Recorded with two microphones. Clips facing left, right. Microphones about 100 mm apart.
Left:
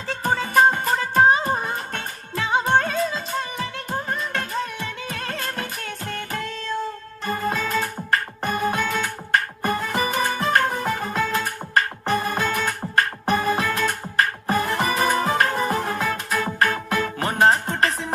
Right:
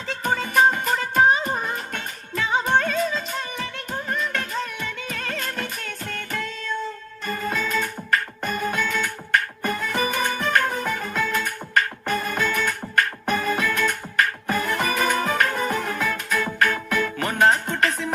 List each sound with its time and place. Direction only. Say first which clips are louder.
0.2 s music: left 1 dB; 35° left (ahead or behind)